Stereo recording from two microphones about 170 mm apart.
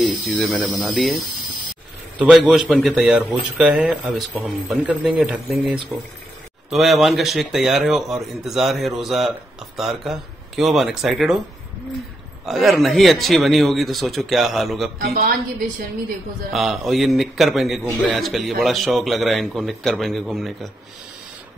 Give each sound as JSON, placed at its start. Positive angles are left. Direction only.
{"t": 0.0, "sound": "a man's voice", "side_deg": 0}
{"t": 2.1, "sound": "a man's voice", "side_deg": -5}
{"t": 12.4, "sound": "a man's voice", "side_deg": 0}
{"t": 15.0, "sound": "a woman's voice", "side_deg": -60}
{"t": 16.5, "sound": "a man's voice", "side_deg": 0}